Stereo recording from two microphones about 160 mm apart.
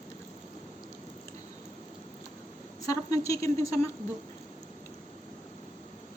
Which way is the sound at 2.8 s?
20° left (ahead or behind).